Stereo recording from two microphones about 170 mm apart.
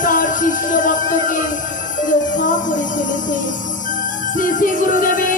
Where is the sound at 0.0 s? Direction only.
50° left (ahead or behind).